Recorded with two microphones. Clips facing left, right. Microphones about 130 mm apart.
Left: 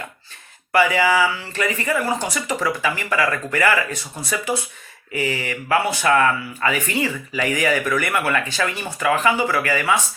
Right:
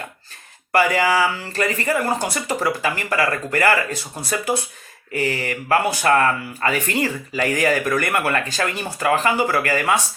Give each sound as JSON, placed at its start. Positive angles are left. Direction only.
{"t": 0.7, "sound": "speech", "side_deg": -40}
{"t": 5.1, "sound": "mantra", "side_deg": -40}
{"t": 6.0, "sound": "speech", "side_deg": -40}